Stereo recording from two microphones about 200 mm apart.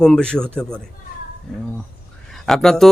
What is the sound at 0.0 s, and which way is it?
Speech, 5° left (ahead or behind).